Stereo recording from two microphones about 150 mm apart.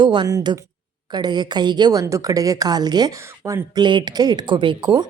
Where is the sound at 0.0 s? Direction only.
30° right (ahead or behind).